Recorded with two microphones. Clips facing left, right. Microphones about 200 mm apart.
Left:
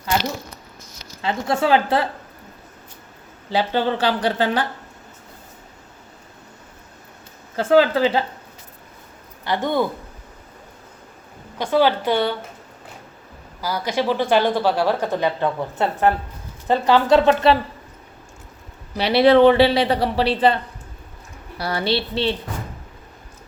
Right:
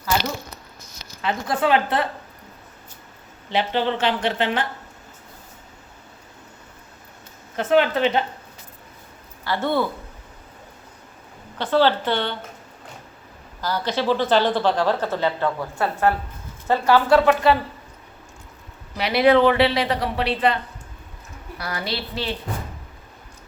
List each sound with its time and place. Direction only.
1.2 s speech: 25° left (ahead or behind)
3.5 s speech: 35° left (ahead or behind)
7.5 s speech: 30° left (ahead or behind)
9.4 s speech: 15° left (ahead or behind)
11.5 s a woman's voice: 10° left (ahead or behind)
13.6 s a woman's voice: 10° left (ahead or behind)
18.9 s speech: 30° left (ahead or behind)
21.6 s speech: 30° left (ahead or behind)